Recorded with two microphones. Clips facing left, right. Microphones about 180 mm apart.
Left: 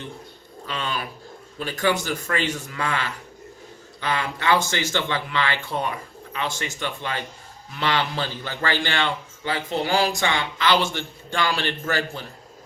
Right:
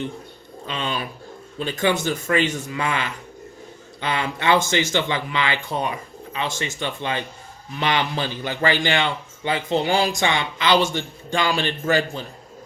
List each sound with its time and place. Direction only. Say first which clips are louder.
0.7 s a man's voice: right 2 dB; 20° right (ahead or behind)